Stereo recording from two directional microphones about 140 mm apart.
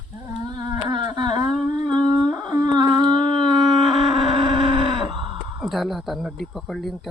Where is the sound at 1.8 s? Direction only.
30° right (ahead or behind).